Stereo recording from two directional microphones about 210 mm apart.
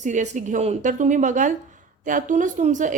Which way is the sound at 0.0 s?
35° right (ahead or behind).